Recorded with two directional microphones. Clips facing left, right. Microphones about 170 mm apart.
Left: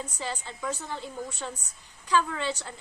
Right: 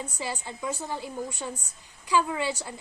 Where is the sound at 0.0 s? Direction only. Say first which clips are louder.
Right 1 dB; 10° right (ahead or behind).